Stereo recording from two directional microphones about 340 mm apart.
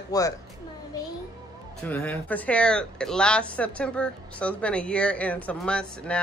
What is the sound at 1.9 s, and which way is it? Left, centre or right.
Speech, centre.